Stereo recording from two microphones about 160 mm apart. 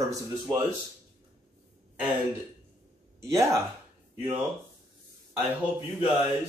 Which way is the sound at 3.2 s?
20° right (ahead or behind).